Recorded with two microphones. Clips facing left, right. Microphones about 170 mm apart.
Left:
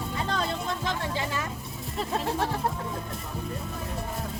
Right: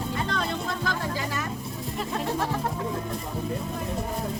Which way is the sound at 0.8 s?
25° left (ahead or behind).